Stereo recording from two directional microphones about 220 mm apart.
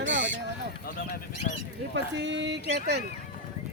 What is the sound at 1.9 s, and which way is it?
Speech, 55° right (ahead or behind).